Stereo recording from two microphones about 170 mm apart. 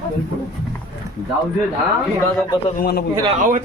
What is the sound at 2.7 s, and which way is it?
Speech, 65° left (ahead or behind).